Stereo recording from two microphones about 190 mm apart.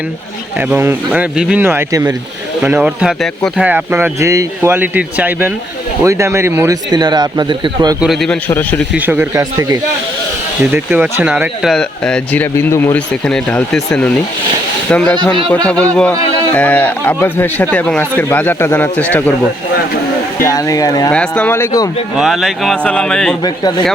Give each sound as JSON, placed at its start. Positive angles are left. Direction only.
{"t": 0.7, "sound": "speech", "side_deg": -10}
{"t": 2.6, "sound": "speech", "side_deg": -10}
{"t": 8.0, "sound": "speech", "side_deg": 0}
{"t": 8.4, "sound": "speech", "side_deg": 10}
{"t": 8.9, "sound": "speech", "side_deg": -10}
{"t": 10.8, "sound": "speech", "side_deg": -5}
{"t": 20.4, "sound": "speech", "side_deg": 15}
{"t": 21.1, "sound": "speech", "side_deg": 5}
{"t": 22.1, "sound": "speech", "side_deg": 0}
{"t": 23.4, "sound": "speech", "side_deg": 20}